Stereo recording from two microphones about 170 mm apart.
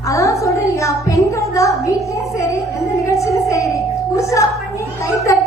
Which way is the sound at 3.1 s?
20° left (ahead or behind).